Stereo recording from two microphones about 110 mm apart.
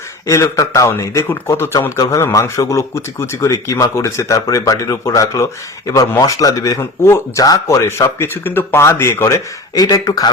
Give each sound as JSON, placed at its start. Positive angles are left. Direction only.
{"t": 0.3, "sound": "speech", "side_deg": 25}